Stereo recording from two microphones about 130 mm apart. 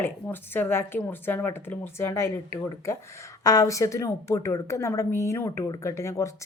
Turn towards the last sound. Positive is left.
turn(degrees=25)  # may be behind; listen again after turning